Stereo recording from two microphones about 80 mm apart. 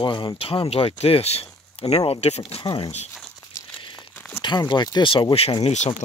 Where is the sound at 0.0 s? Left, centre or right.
Left.